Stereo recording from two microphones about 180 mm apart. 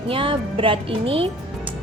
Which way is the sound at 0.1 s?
30° right (ahead or behind).